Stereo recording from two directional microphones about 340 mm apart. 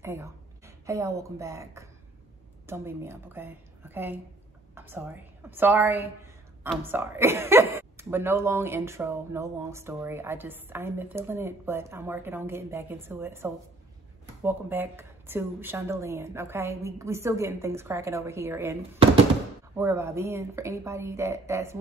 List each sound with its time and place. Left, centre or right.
0.0 s a woman's voice: centre